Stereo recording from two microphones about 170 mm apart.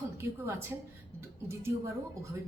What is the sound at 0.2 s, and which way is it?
Speech, 15° right (ahead or behind).